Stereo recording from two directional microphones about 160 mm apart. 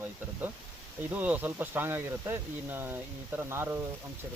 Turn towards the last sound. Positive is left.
turn(degrees=-15)  # may be behind; listen again after turning